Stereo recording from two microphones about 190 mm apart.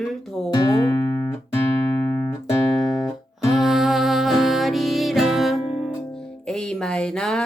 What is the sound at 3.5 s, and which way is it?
Music, centre (ahead or behind).